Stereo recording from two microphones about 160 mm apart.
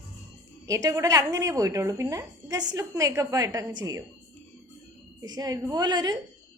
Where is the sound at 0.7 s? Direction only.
20° right (ahead or behind).